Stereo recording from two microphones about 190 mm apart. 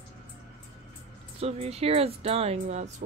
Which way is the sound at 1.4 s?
35° right (ahead or behind).